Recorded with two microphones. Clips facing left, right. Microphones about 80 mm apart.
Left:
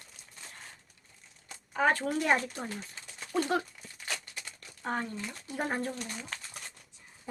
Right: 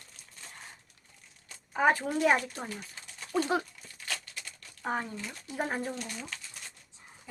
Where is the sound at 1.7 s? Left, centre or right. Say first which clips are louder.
Right 1 dB; centre.